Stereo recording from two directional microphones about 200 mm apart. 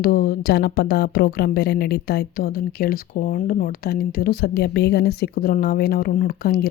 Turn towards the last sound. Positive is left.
turn(degrees=50)  # may be behind; listen again after turning